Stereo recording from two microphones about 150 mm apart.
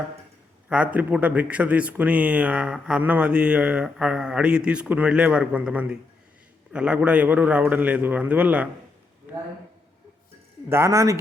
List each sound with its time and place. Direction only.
0.7 s speech: 10° right (ahead or behind)
10.7 s speech: 20° right (ahead or behind)